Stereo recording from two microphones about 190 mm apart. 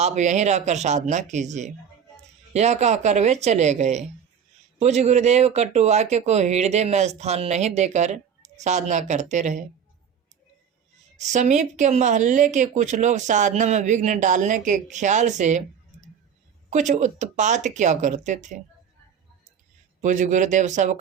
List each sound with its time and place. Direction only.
0.0 s speech: 40° right (ahead or behind)
11.3 s speech: 40° right (ahead or behind)
20.0 s speech: 40° right (ahead or behind)